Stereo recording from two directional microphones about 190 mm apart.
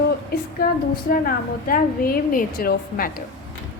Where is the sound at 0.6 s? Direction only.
50° left (ahead or behind).